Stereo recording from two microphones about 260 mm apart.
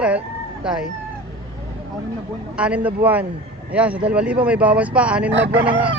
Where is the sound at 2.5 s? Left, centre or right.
Centre.